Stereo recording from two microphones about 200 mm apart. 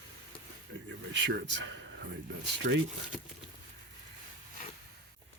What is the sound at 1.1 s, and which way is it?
Speech, 65° right (ahead or behind).